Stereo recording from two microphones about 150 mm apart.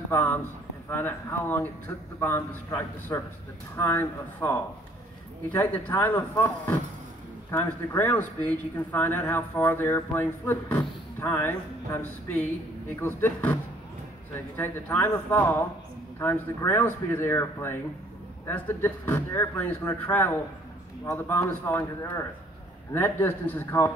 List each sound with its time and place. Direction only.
0.1 s speech: 15° left (ahead or behind)
14.6 s speech: 15° left (ahead or behind)
22.9 s speech: 15° left (ahead or behind)